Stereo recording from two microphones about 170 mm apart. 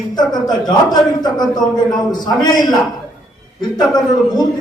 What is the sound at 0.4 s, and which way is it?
A man's voice, 25° left (ahead or behind).